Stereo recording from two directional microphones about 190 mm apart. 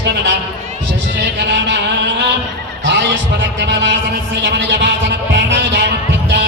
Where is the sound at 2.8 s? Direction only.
65° right (ahead or behind).